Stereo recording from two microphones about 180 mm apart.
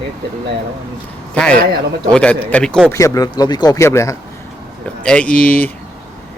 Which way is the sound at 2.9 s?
15° left (ahead or behind).